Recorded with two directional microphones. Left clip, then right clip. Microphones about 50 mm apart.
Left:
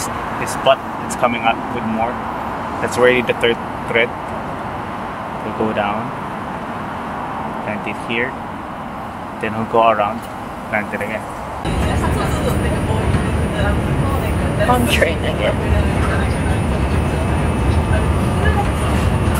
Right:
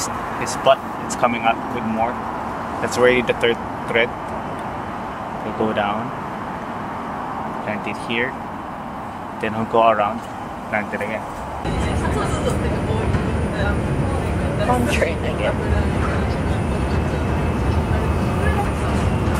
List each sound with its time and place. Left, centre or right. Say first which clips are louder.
1.2 s speech: left 2 dB; right
2.8 s speech: left 2 dB; centre
9.4 s speech: left 2 dB; right
14.7 s speech: left 4 dB; centre